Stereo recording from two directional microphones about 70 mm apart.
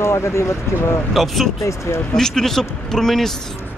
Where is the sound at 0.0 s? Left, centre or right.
Left.